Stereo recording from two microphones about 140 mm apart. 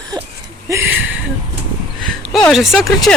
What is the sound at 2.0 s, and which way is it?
Speech, 5° left (ahead or behind).